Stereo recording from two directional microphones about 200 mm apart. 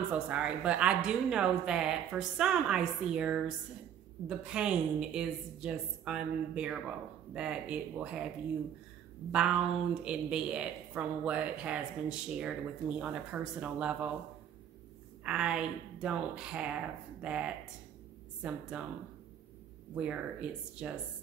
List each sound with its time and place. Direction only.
0.1 s a woman's voice: 5° right (ahead or behind)
9.3 s a woman's voice: 5° right (ahead or behind)
15.2 s a woman's voice: 5° right (ahead or behind)
20.0 s a woman's voice: 5° right (ahead or behind)